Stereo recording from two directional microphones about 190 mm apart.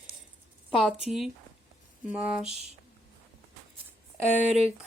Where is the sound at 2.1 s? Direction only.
5° right (ahead or behind).